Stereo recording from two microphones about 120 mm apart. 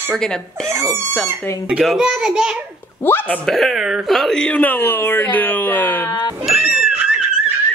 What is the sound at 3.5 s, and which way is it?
Speech, centre (ahead or behind).